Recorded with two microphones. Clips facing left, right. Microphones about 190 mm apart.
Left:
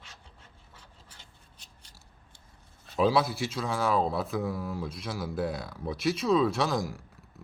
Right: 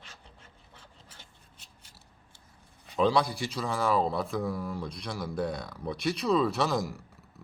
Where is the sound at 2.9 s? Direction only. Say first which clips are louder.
Even; 5° left (ahead or behind).